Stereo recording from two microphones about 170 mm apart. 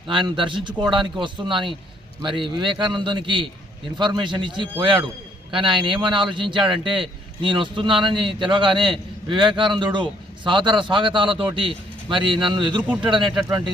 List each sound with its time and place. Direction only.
0.1 s a man's voice: 30° right (ahead or behind)